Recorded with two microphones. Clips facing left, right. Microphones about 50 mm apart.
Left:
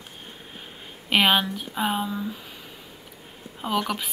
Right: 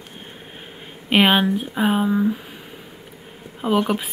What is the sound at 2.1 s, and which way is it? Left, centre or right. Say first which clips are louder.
Speech: right 11 dB; right.